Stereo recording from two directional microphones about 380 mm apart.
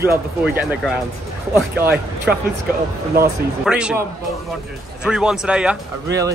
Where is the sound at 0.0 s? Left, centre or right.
Centre.